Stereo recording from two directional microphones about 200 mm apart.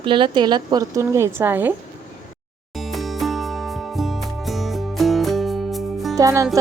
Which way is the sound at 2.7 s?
Centre (ahead or behind).